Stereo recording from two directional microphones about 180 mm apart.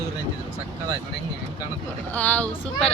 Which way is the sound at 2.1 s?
10° left (ahead or behind).